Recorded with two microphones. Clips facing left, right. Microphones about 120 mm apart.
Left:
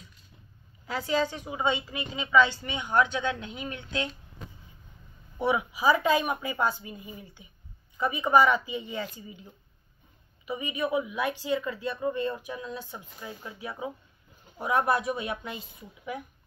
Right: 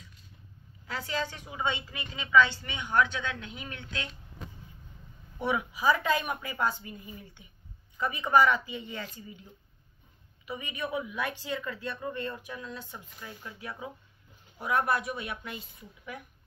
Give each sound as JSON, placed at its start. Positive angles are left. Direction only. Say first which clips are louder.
{"t": 0.8, "sound": "speech", "louder": "left 6 dB", "side_deg": 15}
{"t": 5.4, "sound": "speech", "louder": "left 3 dB", "side_deg": 20}